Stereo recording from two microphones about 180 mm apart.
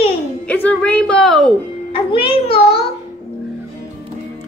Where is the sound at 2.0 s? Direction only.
30° left (ahead or behind).